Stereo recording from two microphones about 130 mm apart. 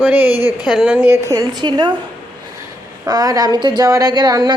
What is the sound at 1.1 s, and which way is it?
Speech, 25° right (ahead or behind).